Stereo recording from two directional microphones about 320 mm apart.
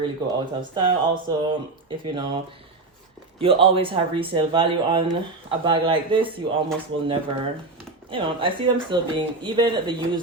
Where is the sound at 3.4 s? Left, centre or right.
Centre.